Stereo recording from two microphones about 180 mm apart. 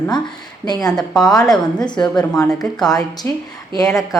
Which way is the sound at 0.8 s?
5° left (ahead or behind).